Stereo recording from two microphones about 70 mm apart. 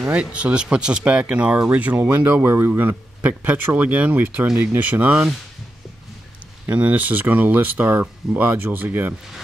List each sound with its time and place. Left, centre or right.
0.0 s speech: centre
2.0 s speech: right
3.3 s speech: right
6.6 s speech: right